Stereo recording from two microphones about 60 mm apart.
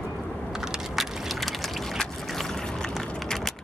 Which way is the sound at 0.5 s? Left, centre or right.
Centre.